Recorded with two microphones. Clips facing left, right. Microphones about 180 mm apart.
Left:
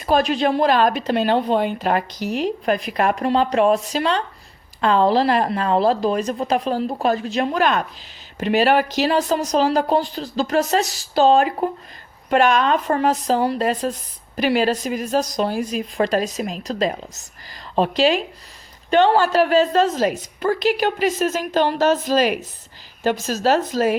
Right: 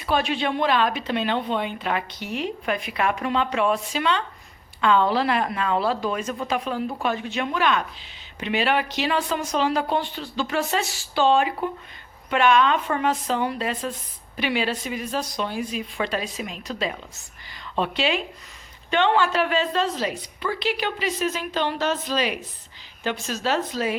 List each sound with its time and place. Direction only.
0.0 s a woman's voice: 40° left (ahead or behind)